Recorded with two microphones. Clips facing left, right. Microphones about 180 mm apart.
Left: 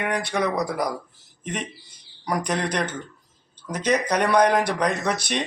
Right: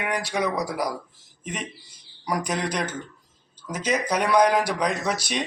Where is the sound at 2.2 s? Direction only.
5° right (ahead or behind).